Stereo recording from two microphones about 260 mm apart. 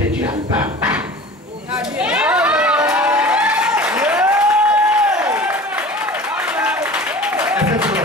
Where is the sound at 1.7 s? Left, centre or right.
Centre.